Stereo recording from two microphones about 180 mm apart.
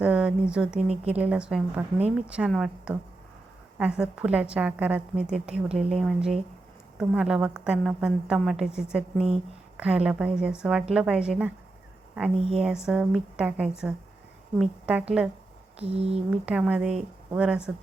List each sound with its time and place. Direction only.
0.0 s a woman's voice: 5° right (ahead or behind)
15.8 s speech: 35° right (ahead or behind)
16.3 s a woman's voice: 5° right (ahead or behind)